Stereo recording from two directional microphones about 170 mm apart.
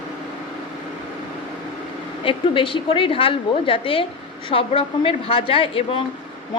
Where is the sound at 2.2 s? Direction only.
30° left (ahead or behind).